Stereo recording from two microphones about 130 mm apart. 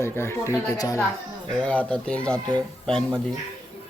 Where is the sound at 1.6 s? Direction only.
10° left (ahead or behind).